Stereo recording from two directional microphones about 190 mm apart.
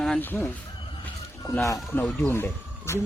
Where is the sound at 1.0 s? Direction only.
10° left (ahead or behind).